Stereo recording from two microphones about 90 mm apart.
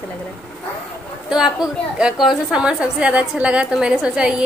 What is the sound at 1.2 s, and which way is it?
A woman's voice, 5° right (ahead or behind).